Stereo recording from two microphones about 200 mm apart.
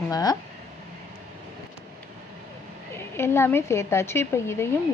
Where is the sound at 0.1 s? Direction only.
20° left (ahead or behind).